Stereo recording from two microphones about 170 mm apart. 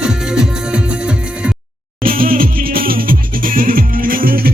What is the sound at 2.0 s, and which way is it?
Music, 55° right (ahead or behind).